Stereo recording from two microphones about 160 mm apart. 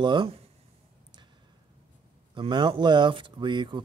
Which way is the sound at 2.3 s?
30° right (ahead or behind).